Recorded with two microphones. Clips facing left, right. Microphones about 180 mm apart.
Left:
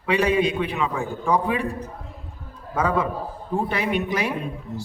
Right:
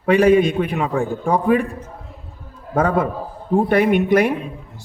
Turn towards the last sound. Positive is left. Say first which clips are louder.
# right 9 dB
turn(degrees=-55)  # may be behind; listen again after turning